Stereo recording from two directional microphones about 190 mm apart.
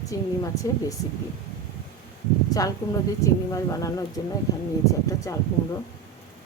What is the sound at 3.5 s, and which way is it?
Speech, 15° left (ahead or behind).